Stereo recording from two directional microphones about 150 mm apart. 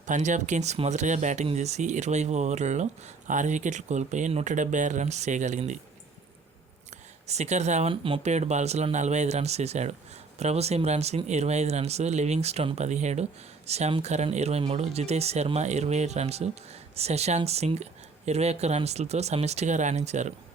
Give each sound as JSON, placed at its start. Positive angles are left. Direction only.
{"t": 0.0, "sound": "speech", "side_deg": -55}
{"t": 7.3, "sound": "speech", "side_deg": -50}